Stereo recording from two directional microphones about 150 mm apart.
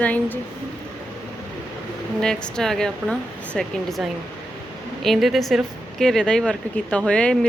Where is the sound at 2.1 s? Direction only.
5° left (ahead or behind).